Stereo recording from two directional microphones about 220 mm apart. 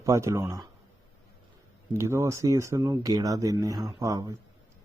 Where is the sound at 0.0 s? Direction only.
15° right (ahead or behind).